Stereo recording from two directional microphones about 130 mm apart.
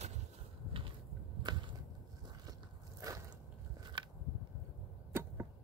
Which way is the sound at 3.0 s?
30° right (ahead or behind).